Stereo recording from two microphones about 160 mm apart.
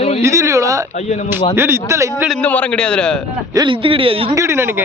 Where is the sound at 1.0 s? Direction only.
45° left (ahead or behind).